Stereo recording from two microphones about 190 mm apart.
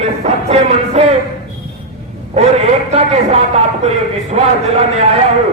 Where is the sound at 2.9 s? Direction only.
35° right (ahead or behind).